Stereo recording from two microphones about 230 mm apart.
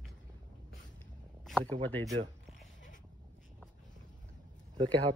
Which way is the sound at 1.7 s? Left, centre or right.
Centre.